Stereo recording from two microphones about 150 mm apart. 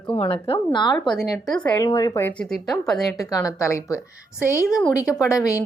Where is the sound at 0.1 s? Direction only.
35° left (ahead or behind).